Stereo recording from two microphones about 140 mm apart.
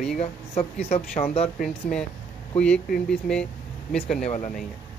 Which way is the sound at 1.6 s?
5° left (ahead or behind).